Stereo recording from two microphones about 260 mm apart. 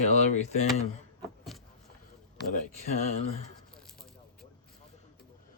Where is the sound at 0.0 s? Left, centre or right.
Left.